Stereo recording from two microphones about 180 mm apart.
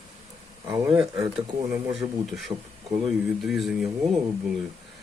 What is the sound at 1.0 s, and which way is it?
Speech, 5° right (ahead or behind).